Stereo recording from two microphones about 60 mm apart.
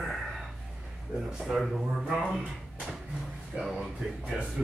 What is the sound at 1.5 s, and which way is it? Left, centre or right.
Speech, centre.